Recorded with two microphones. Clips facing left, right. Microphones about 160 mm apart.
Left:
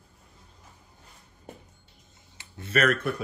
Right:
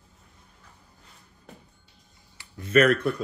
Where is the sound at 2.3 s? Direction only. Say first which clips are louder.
Right 6 dB; 25° left (ahead or behind).